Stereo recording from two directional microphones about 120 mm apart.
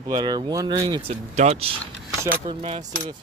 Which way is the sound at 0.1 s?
35° right (ahead or behind).